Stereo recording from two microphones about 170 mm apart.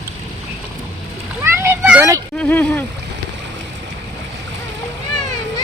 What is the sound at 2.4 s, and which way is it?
Speech, 10° left (ahead or behind).